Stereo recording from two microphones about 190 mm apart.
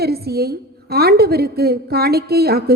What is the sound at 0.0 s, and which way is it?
A woman's voice, 55° right (ahead or behind).